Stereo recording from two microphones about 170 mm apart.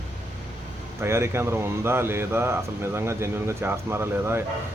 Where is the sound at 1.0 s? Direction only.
15° right (ahead or behind).